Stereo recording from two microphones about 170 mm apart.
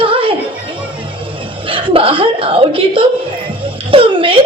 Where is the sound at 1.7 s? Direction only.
30° right (ahead or behind).